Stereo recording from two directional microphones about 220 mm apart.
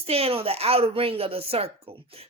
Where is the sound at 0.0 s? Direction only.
25° right (ahead or behind).